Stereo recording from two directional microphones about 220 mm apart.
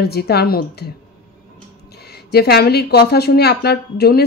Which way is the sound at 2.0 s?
45° left (ahead or behind).